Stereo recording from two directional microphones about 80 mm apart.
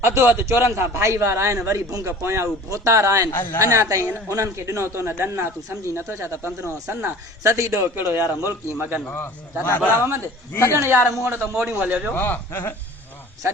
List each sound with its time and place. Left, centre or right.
0.0 s a man's voice: right
9.1 s a man's voice: left
10.7 s a man's voice: right
12.1 s a man's voice: left
13.4 s speech: right